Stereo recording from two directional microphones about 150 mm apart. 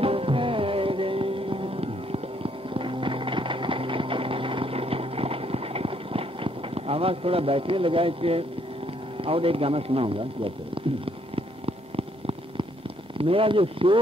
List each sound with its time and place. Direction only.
0.0 s music: 40° right (ahead or behind)
9.2 s a sound: 40° right (ahead or behind)
13.2 s speech: 40° right (ahead or behind)